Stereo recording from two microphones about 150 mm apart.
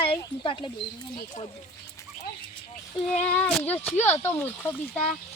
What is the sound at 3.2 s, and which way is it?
Speech, 10° left (ahead or behind).